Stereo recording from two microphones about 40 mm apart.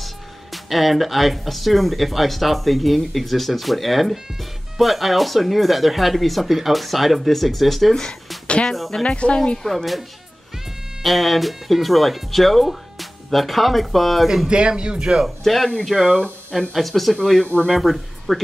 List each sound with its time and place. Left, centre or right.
0.0 s speech: centre
7.9 s speech: left
8.7 s speech: centre
9.0 s speech: left
9.6 s speech: centre
11.0 s speech: centre
14.5 s speech: right
15.2 s speech: centre